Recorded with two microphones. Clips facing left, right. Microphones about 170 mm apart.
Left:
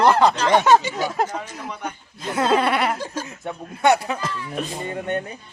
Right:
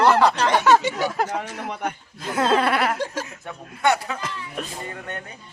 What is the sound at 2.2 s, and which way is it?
Speech, 5° left (ahead or behind).